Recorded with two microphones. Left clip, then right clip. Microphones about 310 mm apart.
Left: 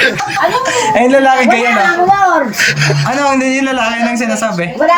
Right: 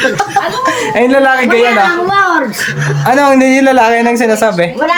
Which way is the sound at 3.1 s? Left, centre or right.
Centre.